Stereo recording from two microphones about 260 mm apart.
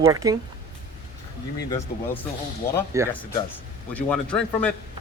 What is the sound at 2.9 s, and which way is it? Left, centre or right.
Speech, centre.